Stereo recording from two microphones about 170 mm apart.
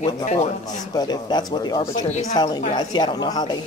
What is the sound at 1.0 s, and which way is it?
Speech, 25° left (ahead or behind).